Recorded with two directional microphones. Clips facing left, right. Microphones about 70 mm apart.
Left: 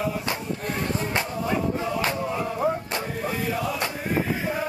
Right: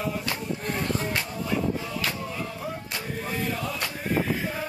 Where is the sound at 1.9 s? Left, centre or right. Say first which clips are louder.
Left 5 dB; left.